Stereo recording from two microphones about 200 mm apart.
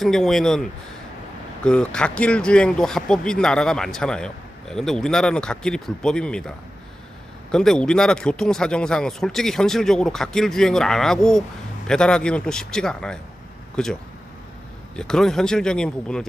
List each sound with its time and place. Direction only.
0.0 s speech: centre (ahead or behind)
7.5 s speech: 5° left (ahead or behind)
14.9 s speech: 5° left (ahead or behind)